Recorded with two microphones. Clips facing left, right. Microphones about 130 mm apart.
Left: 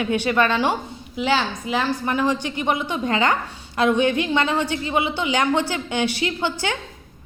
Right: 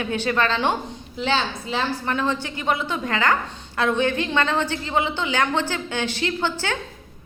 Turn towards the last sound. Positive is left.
turn(degrees=15)  # may be behind; listen again after turning